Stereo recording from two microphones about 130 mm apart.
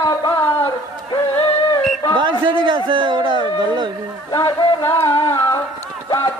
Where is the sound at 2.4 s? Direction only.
35° right (ahead or behind).